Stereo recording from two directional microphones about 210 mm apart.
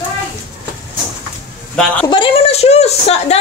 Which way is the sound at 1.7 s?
5° left (ahead or behind).